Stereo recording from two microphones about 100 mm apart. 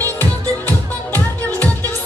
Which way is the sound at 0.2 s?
20° left (ahead or behind).